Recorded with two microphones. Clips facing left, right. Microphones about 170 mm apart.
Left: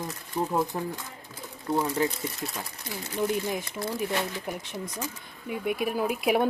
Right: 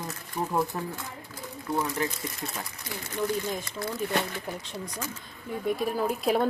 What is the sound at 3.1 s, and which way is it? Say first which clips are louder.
Speech: left 2 dB; 15° left (ahead or behind).